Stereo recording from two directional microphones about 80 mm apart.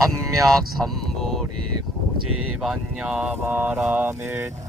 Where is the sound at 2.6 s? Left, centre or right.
Centre; by 4.5 s right.